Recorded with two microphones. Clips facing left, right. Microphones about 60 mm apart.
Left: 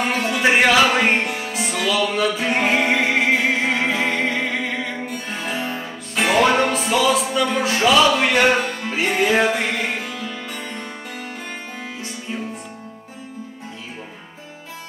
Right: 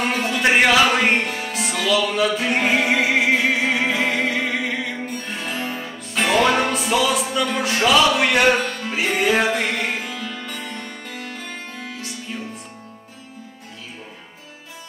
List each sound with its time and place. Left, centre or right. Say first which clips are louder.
0.0 s music: left 1 dB; centre
8.5 s music: left 1 dB; centre
8.8 s music: left 1 dB; centre